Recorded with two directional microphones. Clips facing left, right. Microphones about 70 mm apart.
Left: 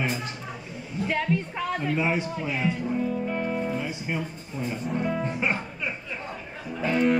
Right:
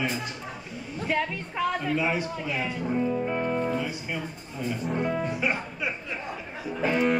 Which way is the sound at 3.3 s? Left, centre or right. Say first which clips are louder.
Right 1 dB; centre.